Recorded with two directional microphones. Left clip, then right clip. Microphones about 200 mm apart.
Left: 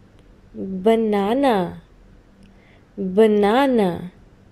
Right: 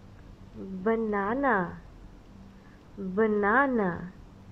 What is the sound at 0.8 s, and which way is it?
Speech, 20° left (ahead or behind).